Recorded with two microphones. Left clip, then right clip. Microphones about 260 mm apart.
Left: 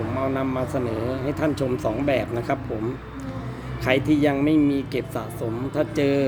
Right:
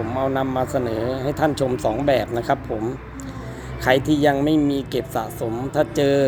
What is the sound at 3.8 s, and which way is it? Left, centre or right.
Speech, centre.